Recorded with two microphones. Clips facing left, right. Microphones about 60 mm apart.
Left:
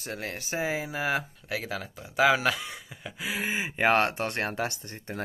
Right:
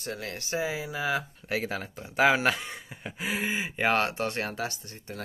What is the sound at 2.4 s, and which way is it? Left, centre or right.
Speech, right.